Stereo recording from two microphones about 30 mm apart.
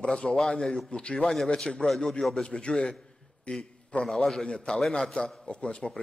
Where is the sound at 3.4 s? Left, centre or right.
Left.